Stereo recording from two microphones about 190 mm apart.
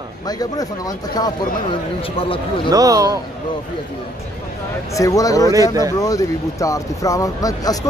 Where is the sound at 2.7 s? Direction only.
20° right (ahead or behind).